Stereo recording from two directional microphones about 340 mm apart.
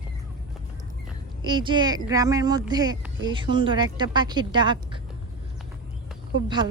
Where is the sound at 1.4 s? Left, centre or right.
Centre.